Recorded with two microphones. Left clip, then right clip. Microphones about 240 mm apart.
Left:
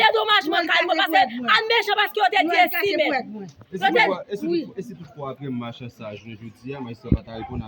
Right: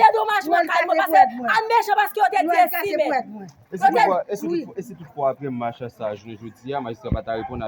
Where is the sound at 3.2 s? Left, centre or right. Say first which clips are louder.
Right 2 dB; centre.